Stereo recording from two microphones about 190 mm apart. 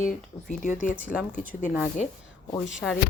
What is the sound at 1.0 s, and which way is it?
Speech, 10° right (ahead or behind).